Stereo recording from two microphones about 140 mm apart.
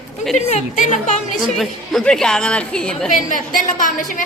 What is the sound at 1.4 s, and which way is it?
A woman's voice, centre (ahead or behind).